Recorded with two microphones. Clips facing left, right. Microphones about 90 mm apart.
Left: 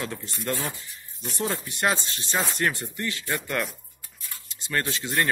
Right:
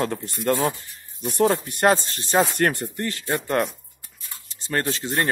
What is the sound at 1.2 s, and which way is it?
Speech, 55° right (ahead or behind).